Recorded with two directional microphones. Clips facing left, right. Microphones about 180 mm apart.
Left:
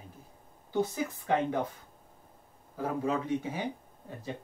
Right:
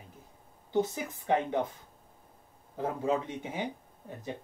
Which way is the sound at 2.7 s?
20° right (ahead or behind).